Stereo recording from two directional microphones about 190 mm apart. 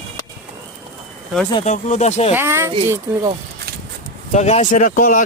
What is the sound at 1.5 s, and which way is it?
Speech, 35° left (ahead or behind).